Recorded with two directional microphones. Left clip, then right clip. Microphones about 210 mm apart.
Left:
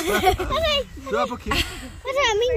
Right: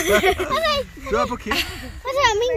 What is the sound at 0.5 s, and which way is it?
Speech, 5° left (ahead or behind).